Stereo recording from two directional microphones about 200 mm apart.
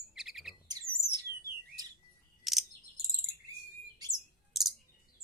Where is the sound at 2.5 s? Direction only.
Centre (ahead or behind).